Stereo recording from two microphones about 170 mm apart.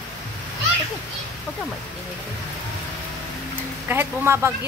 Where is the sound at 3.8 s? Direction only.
15° right (ahead or behind).